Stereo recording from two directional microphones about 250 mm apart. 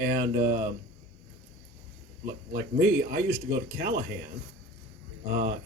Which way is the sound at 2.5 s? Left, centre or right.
Right.